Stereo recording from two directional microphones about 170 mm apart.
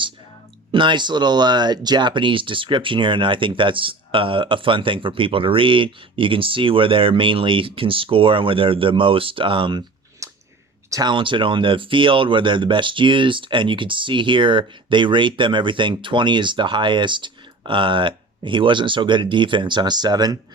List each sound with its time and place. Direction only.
0.7 s speech: 30° right (ahead or behind)
10.2 s chewing: 20° right (ahead or behind)
10.8 s speech: 20° right (ahead or behind)